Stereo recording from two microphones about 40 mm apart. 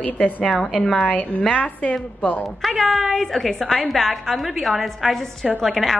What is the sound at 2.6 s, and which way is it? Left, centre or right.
A woman's voice, centre.